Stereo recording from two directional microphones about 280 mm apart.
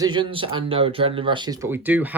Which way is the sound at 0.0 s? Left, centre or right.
Centre.